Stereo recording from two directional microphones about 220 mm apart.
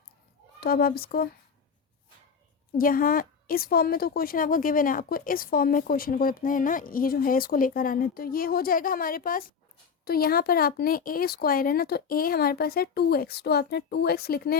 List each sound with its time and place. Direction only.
0.6 s speech: 45° left (ahead or behind)
2.7 s a woman's voice: 40° left (ahead or behind)